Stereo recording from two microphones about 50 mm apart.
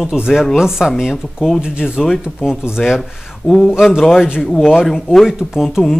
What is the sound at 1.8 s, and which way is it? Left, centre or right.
Speech, centre.